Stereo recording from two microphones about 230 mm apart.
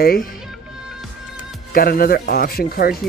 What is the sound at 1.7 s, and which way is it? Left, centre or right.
Speech, left.